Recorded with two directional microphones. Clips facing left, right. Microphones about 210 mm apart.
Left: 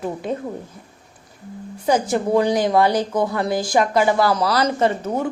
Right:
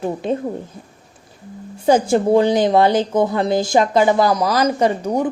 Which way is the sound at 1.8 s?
30° right (ahead or behind).